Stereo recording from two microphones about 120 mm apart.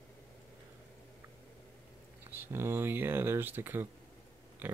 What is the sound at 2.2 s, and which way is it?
Speech, 20° right (ahead or behind).